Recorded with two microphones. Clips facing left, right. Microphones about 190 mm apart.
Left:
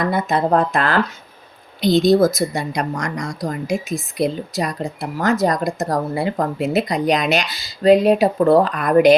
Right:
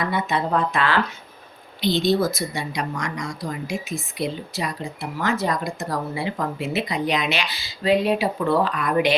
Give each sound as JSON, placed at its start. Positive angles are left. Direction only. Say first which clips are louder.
{"t": 0.0, "sound": "speech", "louder": "left 5 dB", "side_deg": 45}